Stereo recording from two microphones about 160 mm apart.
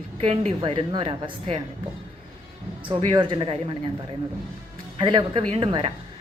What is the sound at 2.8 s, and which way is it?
Speech, 30° right (ahead or behind).